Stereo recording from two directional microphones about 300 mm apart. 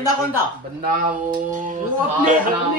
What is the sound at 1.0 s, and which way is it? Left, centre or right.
Speech, right.